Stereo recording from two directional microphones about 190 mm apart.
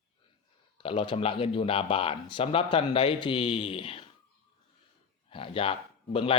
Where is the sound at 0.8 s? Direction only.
30° left (ahead or behind).